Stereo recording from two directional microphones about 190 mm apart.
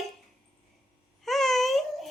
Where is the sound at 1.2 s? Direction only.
Centre (ahead or behind).